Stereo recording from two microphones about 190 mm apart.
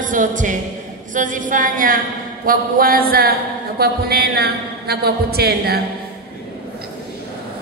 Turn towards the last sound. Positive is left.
turn(degrees=-55)  # may be behind; listen again after turning